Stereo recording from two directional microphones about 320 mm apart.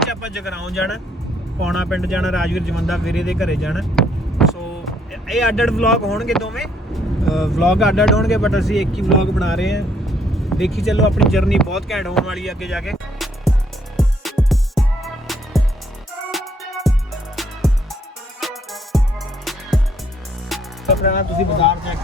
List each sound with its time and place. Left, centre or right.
0.0 s speech: centre
13.9 s music: centre
20.5 s music: centre
21.0 s speech: left